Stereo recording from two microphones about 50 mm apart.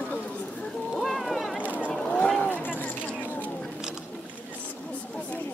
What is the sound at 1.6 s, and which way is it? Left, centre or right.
Boat, right.